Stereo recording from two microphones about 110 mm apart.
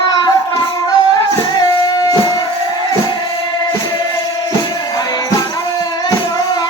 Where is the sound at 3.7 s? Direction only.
40° left (ahead or behind).